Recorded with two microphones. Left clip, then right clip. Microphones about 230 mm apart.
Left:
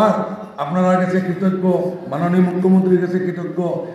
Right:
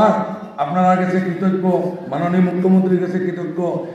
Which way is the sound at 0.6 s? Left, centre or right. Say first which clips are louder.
Right 3 dB; left.